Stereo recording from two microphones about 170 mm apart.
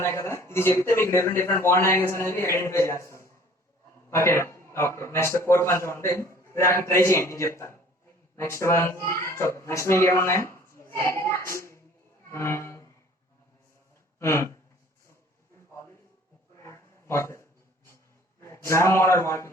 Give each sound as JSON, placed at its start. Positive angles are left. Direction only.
{"t": 0.0, "sound": "speech", "side_deg": 15}
{"t": 12.3, "sound": "music", "side_deg": 15}
{"t": 14.2, "sound": "speech", "side_deg": 15}
{"t": 16.6, "sound": "a sound", "side_deg": 15}
{"t": 18.3, "sound": "a man's voice", "side_deg": 15}